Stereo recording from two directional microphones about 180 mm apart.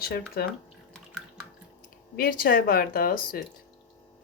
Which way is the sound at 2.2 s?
55° left (ahead or behind).